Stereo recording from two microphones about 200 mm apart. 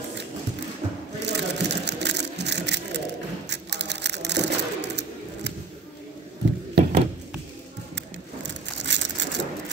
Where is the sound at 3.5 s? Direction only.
60° right (ahead or behind).